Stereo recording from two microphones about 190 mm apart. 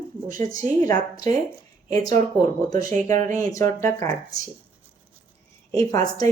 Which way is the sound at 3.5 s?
15° left (ahead or behind).